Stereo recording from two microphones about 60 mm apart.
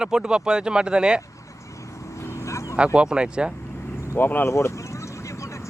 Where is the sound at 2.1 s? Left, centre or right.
Left.